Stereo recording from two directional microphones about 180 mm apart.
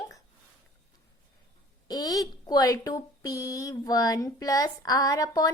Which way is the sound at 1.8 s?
20° left (ahead or behind).